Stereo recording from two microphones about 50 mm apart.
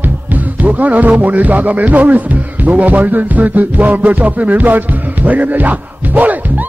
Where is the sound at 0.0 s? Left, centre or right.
Right.